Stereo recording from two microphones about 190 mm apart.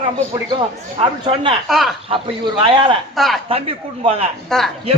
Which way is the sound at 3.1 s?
Centre (ahead or behind).